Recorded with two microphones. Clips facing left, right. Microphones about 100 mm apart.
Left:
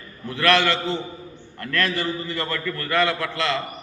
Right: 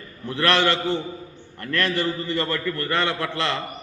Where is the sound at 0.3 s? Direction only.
20° right (ahead or behind).